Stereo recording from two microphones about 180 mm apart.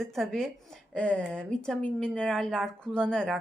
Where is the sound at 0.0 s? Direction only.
Centre (ahead or behind).